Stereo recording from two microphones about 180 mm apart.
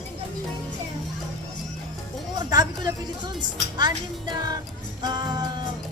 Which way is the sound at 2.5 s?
20° right (ahead or behind).